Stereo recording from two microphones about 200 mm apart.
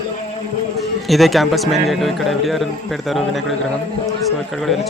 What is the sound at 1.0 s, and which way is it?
Speech, centre (ahead or behind).